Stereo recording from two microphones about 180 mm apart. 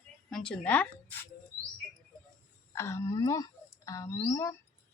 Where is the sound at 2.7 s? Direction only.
15° left (ahead or behind).